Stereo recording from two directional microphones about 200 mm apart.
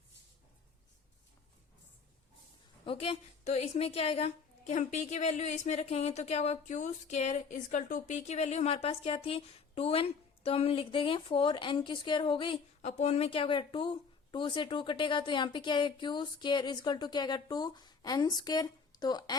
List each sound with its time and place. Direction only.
2.8 s a woman's voice: 30° left (ahead or behind)